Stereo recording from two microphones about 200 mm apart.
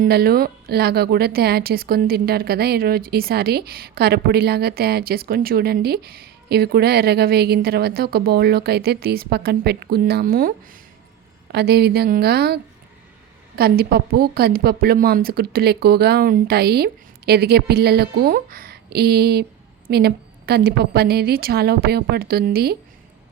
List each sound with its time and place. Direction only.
0.0 s speech: 50° right (ahead or behind)
11.5 s speech: 55° right (ahead or behind)
13.6 s speech: 50° right (ahead or behind)